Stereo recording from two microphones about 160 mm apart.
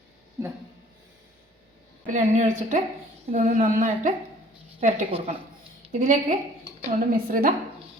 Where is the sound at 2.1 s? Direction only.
50° right (ahead or behind).